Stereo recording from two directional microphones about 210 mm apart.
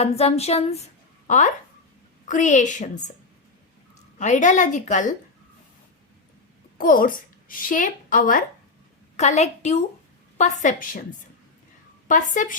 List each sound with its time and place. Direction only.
0.0 s a woman's voice: 30° left (ahead or behind)
4.2 s a woman's voice: 35° left (ahead or behind)
6.7 s a woman's voice: 40° left (ahead or behind)
12.0 s a woman's voice: 40° left (ahead or behind)